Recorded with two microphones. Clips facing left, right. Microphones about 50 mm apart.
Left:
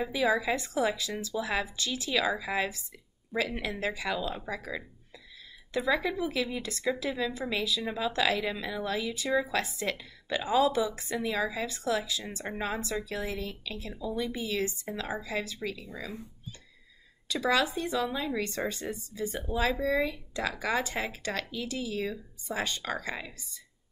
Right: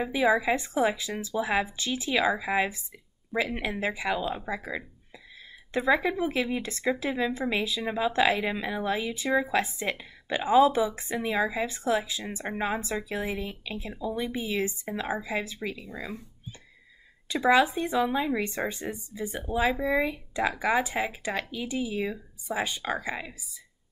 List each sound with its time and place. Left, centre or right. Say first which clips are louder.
0.0 s speech: right 3 dB; right
17.3 s speech: right 5 dB; right